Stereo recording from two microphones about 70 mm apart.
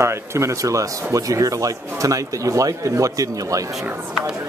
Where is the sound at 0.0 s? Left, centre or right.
Right.